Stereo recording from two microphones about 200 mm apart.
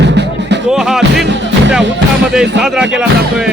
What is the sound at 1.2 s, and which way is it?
Music, 65° right (ahead or behind).